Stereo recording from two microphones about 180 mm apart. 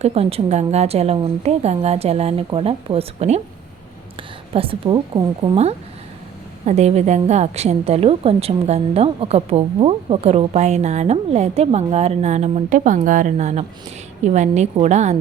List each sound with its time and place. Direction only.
0.0 s a woman's voice: 35° right (ahead or behind)